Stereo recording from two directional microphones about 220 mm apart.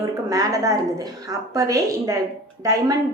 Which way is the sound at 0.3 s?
15° right (ahead or behind).